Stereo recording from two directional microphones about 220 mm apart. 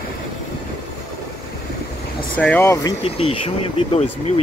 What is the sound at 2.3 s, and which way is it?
Speech, 5° left (ahead or behind).